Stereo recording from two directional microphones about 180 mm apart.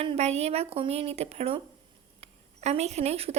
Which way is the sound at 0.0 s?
35° right (ahead or behind).